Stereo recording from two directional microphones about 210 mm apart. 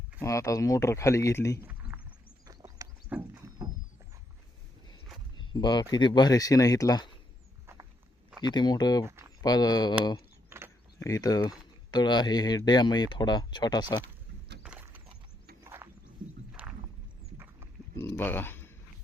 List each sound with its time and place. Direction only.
0.2 s speech: 15° left (ahead or behind)
1.6 s a sound: 10° right (ahead or behind)
2.5 s horse: 15° right (ahead or behind)
5.4 s speech: 20° left (ahead or behind)
8.4 s speech: 20° left (ahead or behind)
11.0 s speech: 15° left (ahead or behind)
14.6 s horse: 10° right (ahead or behind)
16.5 s a sound: 5° right (ahead or behind)
17.9 s a sound: 10° left (ahead or behind)